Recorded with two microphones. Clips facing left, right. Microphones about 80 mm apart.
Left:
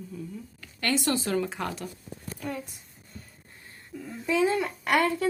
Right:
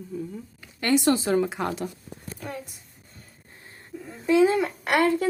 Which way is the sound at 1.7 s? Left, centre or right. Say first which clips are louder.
Right 5 dB; right.